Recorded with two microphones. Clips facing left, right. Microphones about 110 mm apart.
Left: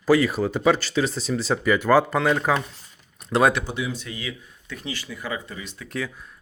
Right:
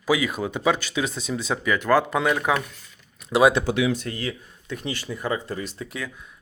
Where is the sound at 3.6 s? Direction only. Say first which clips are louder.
Right 7 dB; 90° right.